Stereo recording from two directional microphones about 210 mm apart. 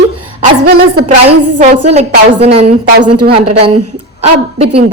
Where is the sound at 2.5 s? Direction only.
30° right (ahead or behind).